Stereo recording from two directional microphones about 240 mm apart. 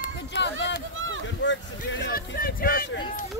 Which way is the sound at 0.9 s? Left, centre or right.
Right.